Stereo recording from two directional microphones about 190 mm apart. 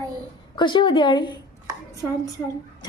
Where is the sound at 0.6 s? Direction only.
25° left (ahead or behind).